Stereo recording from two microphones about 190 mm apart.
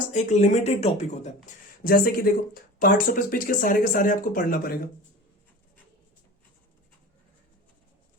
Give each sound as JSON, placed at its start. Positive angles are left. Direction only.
{"t": 0.1, "sound": "speech", "side_deg": 40}
{"t": 1.5, "sound": "speech", "side_deg": 50}